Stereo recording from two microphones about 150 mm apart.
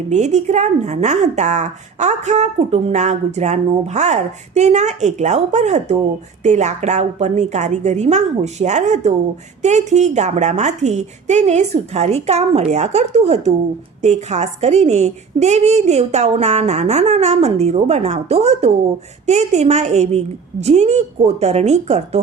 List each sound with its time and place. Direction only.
0.1 s a woman's voice: 50° right (ahead or behind)